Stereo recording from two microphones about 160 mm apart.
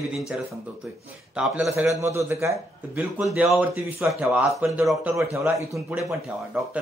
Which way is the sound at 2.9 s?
5° right (ahead or behind).